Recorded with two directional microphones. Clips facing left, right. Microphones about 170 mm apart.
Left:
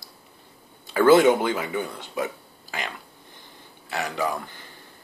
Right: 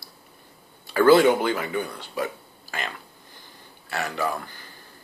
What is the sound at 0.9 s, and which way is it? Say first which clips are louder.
Speech: even; 20° left (ahead or behind).